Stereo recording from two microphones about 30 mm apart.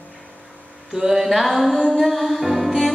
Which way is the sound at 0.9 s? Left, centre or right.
Centre.